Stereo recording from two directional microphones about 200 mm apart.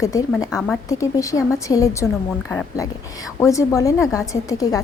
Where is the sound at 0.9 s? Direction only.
15° left (ahead or behind).